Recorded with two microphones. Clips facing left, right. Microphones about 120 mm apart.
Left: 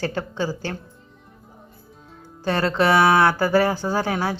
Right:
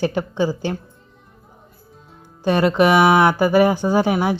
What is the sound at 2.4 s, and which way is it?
Speech, 15° right (ahead or behind).